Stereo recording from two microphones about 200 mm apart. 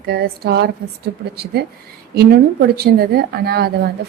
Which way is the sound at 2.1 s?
55° right (ahead or behind).